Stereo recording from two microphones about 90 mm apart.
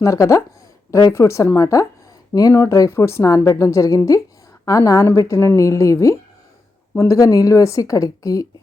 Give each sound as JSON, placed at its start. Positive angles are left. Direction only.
{"t": 0.0, "sound": "a woman's voice", "side_deg": 35}